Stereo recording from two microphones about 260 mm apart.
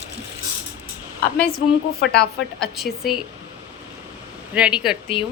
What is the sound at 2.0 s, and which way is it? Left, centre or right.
Speech, left.